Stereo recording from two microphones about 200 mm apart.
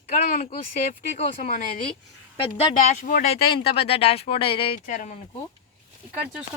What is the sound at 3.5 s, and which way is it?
Speech, 30° left (ahead or behind).